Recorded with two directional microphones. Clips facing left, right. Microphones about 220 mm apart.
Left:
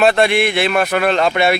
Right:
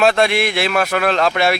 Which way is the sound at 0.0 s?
Centre (ahead or behind).